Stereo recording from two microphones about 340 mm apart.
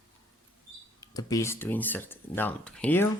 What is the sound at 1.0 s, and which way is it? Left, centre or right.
Speech, centre.